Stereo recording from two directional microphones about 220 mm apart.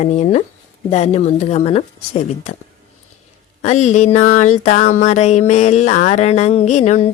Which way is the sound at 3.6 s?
30° left (ahead or behind).